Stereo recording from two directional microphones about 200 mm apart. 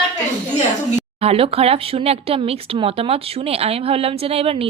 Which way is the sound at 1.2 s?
30° right (ahead or behind).